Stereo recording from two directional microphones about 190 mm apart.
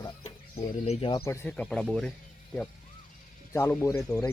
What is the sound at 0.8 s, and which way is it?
Speech, 30° left (ahead or behind).